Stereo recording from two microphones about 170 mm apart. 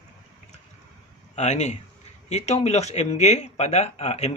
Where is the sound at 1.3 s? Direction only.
40° left (ahead or behind).